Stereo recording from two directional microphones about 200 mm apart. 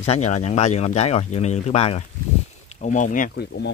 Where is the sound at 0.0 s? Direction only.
35° left (ahead or behind); by 3.7 s 55° left (ahead or behind).